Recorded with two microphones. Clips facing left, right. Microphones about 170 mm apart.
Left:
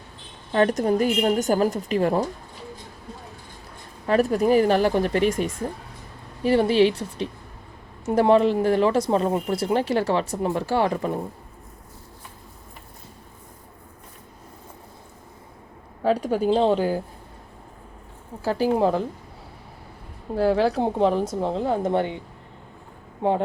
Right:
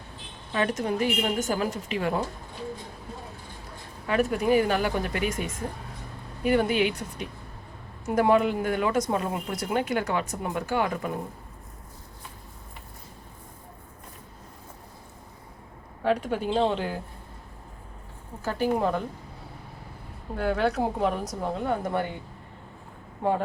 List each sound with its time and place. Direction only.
0.5 s speech: 40° left (ahead or behind)
4.0 s speech: 35° left (ahead or behind)
16.0 s speech: 35° left (ahead or behind)
18.4 s speech: 35° left (ahead or behind)
20.3 s a woman's voice: 30° left (ahead or behind)